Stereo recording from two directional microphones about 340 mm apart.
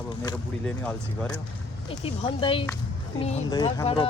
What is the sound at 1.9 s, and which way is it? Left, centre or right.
Speech, centre.